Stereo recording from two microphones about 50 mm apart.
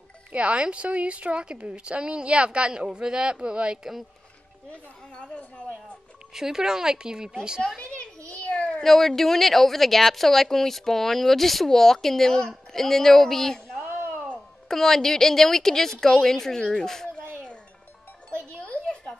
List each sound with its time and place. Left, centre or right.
0.3 s a woman's voice: right
5.1 s a woman's voice: left
6.3 s speech: centre
7.8 s children playing: left
8.8 s speech: centre
13.7 s a sound: right
14.7 s a woman's voice: centre